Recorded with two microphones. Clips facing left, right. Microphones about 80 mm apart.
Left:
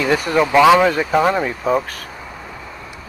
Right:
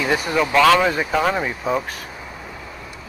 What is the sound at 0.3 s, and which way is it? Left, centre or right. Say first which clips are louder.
Speech: left 4 dB; centre.